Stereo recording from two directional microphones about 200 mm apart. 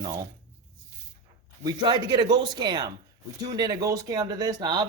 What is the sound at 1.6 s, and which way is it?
Speech, 20° right (ahead or behind).